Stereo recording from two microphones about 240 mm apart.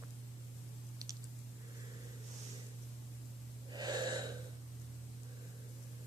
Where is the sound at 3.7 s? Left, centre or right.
Centre.